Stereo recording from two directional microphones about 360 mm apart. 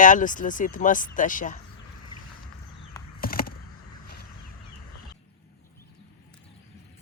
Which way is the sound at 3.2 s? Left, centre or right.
Left.